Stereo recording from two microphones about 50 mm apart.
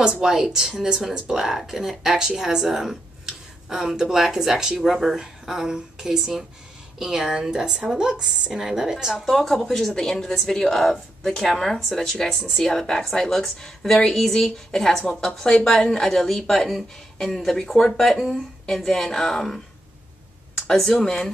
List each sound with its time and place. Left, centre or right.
0.0 s speech: centre
9.2 s a woman's voice: centre
20.6 s a woman's voice: centre